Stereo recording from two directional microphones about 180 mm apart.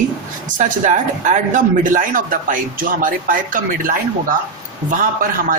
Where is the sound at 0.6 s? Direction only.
45° right (ahead or behind).